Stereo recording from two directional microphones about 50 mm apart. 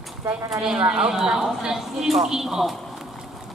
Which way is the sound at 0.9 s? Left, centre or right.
Centre.